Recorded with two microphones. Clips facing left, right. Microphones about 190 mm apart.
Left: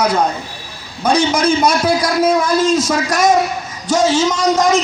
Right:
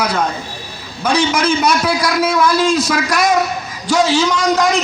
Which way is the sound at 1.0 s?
60° right (ahead or behind).